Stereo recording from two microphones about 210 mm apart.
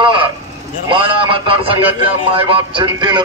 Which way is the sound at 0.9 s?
25° right (ahead or behind).